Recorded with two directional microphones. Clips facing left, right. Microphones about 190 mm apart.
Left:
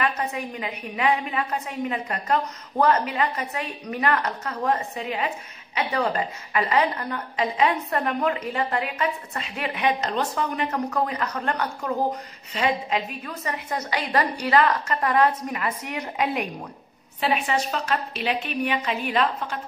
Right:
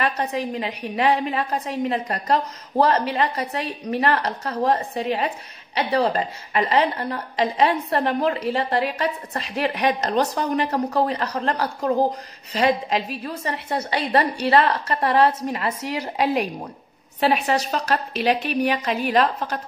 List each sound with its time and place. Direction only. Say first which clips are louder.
0.0 s a woman's voice: right 3 dB; 35° right (ahead or behind)